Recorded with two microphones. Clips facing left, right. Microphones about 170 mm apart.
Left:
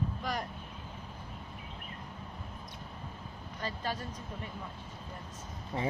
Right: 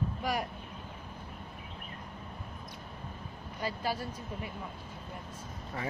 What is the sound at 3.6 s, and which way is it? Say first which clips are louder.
Speech: right 3 dB; 10° right (ahead or behind).